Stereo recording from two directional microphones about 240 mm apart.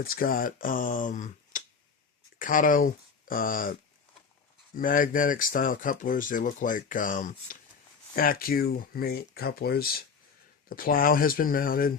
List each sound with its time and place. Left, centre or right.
0.0 s speech: left
4.8 s speech: left